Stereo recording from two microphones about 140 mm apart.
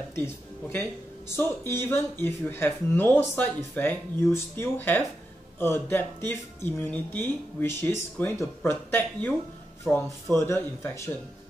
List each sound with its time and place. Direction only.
0.1 s speech: 15° left (ahead or behind)
9.8 s speech: 5° left (ahead or behind)
10.4 s speech: 20° left (ahead or behind)